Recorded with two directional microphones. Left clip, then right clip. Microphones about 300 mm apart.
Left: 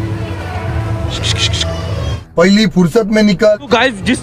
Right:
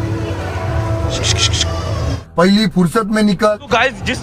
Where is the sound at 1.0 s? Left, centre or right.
Centre.